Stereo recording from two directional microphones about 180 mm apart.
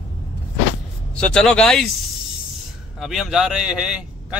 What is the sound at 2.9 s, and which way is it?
A man's voice, centre (ahead or behind).